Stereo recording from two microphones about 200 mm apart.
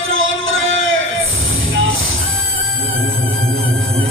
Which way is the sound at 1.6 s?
80° right.